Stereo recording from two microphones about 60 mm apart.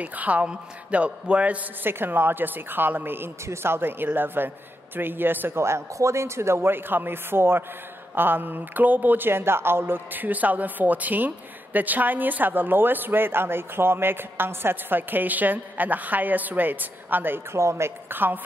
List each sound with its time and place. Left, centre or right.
0.0 s a man's voice: right
1.9 s a woman's voice: right
5.6 s a woman's voice: right
17.6 s speech: right
18.1 s a woman's voice: right